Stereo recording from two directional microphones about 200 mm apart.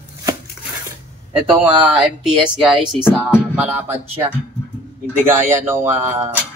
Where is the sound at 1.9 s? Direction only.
5° right (ahead or behind).